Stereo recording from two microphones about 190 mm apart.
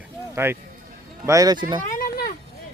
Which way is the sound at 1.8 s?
50° left (ahead or behind).